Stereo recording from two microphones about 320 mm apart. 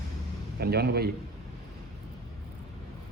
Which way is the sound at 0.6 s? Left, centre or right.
Right.